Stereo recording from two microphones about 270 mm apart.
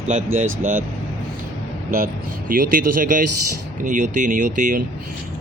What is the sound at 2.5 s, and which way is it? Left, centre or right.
Speech, right.